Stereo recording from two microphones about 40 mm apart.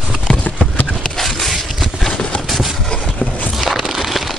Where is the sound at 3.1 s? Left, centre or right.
Left.